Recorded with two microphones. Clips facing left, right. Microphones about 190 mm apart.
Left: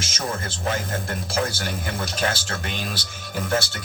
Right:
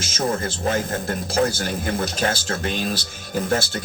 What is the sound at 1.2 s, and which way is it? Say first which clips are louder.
Speech: right 6 dB; 40° right (ahead or behind).